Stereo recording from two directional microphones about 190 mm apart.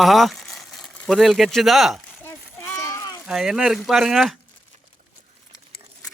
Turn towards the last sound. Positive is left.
turn(degrees=0)  # may be behind; listen again after turning